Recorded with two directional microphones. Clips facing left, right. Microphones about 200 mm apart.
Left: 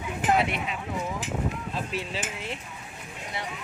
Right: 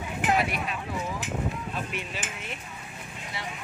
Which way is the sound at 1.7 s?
30° left (ahead or behind).